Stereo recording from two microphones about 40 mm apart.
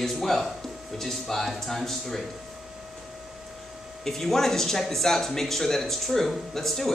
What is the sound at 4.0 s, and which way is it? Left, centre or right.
Speech, centre.